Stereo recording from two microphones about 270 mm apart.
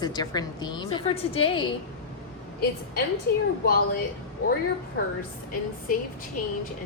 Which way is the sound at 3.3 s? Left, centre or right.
Left.